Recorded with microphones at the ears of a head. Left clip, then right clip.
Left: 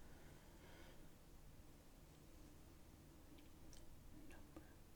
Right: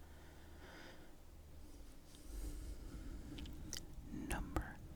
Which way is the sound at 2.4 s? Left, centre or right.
Right.